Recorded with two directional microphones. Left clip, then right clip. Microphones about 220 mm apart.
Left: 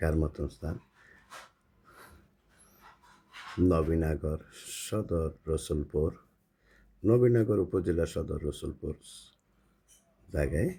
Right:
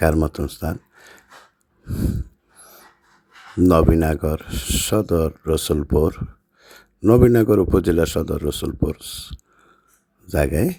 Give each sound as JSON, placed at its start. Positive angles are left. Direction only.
{"t": 0.0, "sound": "speech", "side_deg": -40}
{"t": 3.7, "sound": "speech", "side_deg": -40}